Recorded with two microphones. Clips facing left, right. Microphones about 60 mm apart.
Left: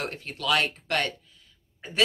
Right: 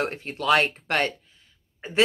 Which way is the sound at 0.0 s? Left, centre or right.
Right.